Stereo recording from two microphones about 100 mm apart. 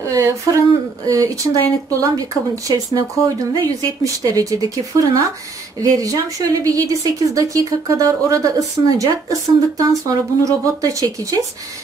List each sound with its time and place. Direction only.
0.1 s speech: 35° right (ahead or behind)